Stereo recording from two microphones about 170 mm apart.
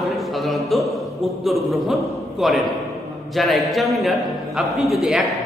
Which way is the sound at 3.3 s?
Centre (ahead or behind).